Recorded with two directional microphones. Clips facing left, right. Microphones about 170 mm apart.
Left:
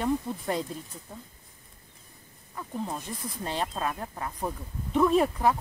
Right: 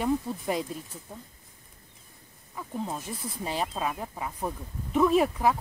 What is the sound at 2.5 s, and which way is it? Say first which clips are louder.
Speech: even; 5° right (ahead or behind).